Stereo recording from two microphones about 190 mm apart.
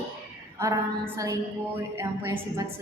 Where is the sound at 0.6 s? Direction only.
15° right (ahead or behind).